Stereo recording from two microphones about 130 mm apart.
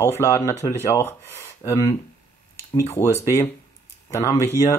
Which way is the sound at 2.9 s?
20° left (ahead or behind).